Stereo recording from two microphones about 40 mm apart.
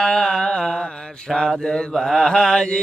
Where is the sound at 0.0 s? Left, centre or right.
Centre.